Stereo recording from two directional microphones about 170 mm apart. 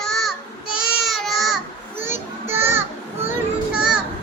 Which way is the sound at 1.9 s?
15° right (ahead or behind).